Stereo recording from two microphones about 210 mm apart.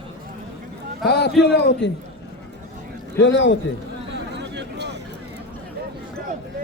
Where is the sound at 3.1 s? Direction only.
60° left (ahead or behind).